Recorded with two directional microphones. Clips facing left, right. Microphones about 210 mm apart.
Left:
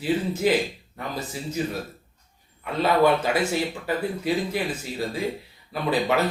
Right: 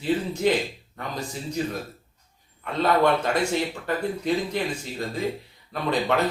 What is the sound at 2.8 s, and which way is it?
Speech, 5° left (ahead or behind).